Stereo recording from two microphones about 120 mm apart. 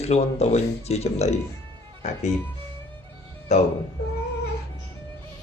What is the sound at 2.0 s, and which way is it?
Speech, 75° left (ahead or behind).